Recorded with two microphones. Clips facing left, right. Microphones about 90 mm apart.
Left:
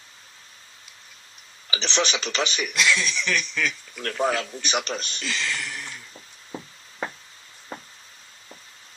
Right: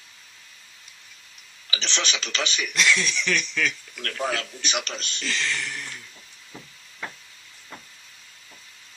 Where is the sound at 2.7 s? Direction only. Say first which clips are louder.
Right 1 dB; centre (ahead or behind).